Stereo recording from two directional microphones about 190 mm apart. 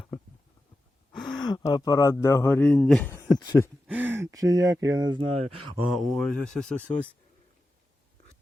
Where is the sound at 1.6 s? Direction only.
20° left (ahead or behind); by 3.1 s centre (ahead or behind).